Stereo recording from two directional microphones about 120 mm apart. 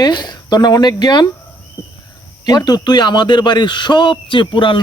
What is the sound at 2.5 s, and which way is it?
A man's voice, 35° left (ahead or behind).